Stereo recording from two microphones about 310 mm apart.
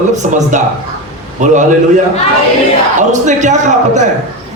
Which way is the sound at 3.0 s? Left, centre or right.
Right.